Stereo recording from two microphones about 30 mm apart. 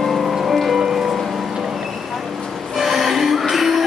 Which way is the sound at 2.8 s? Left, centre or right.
Centre.